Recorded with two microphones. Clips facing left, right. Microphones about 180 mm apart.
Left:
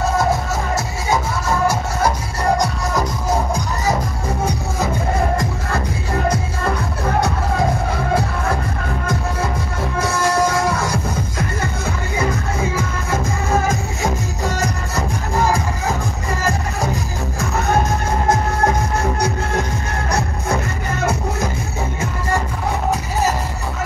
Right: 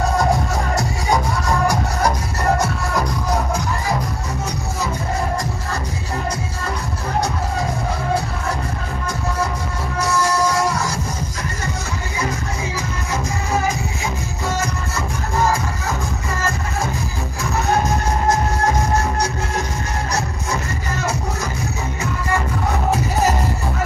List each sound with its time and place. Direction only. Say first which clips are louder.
1.7 s music: even; 10° left (ahead or behind)
9.9 s music: left 1 dB; 55° left (ahead or behind)
20.1 s music: left 6 dB; 55° left (ahead or behind)